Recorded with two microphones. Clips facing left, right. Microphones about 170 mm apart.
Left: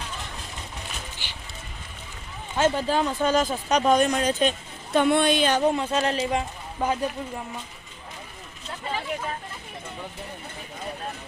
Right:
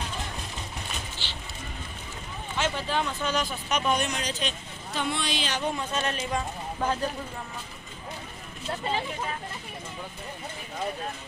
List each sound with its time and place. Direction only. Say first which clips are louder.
2.6 s speech: left 6 dB; 45° left (ahead or behind)
5.7 s speech: left 6 dB; 30° left (ahead or behind)
6.8 s speech: left 3 dB; 10° left (ahead or behind)